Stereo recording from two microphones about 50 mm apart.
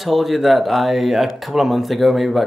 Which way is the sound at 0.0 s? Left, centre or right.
Centre.